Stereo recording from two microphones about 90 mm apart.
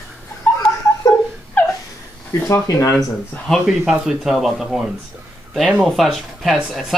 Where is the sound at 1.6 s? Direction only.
20° left (ahead or behind).